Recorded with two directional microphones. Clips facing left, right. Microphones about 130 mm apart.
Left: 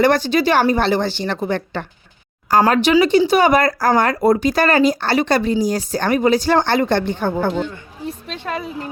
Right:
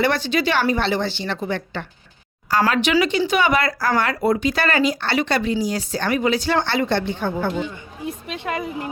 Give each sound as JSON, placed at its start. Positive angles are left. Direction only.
{"t": 0.0, "sound": "a woman's voice", "side_deg": 40}
{"t": 7.5, "sound": "speech", "side_deg": -10}